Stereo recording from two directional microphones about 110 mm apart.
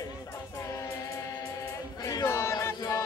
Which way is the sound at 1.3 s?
35° left (ahead or behind).